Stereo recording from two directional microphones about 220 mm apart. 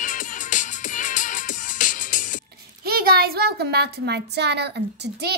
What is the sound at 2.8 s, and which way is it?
A child's voice, 45° right (ahead or behind).